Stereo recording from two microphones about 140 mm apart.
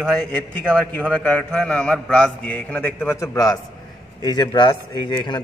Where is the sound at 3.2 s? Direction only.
30° left (ahead or behind).